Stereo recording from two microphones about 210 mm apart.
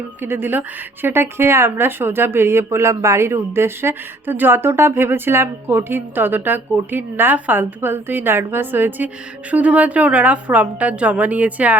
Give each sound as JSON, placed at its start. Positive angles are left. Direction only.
{"t": 0.2, "sound": "speech", "side_deg": -10}